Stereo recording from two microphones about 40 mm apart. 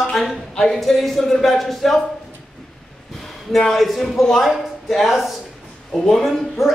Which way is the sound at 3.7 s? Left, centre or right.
Centre.